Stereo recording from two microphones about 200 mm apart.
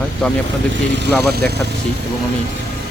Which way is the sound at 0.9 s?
55° right (ahead or behind).